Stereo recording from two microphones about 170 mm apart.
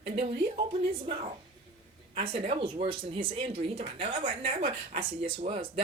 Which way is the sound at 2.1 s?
35° right (ahead or behind).